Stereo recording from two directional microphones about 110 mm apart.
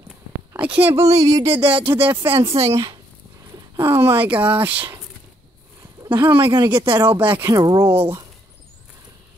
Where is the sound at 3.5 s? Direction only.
25° right (ahead or behind).